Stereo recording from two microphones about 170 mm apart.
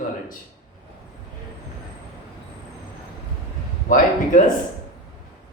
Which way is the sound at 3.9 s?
50° left (ahead or behind).